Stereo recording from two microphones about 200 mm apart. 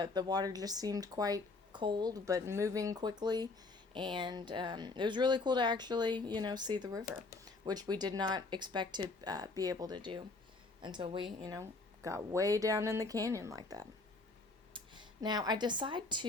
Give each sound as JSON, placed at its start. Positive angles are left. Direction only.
{"t": 0.0, "sound": "speech", "side_deg": -20}